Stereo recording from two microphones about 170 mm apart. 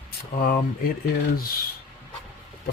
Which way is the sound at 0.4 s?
60° left (ahead or behind).